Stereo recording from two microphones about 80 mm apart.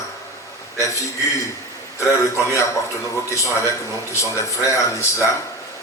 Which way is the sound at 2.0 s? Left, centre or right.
Left.